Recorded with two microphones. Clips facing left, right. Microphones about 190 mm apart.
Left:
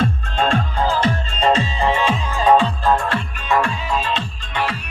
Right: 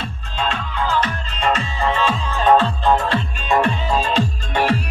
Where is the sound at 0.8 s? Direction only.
30° left (ahead or behind).